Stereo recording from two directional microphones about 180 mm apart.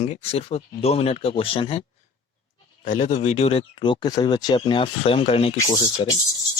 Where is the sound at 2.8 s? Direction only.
40° left (ahead or behind); by 6.1 s 25° left (ahead or behind).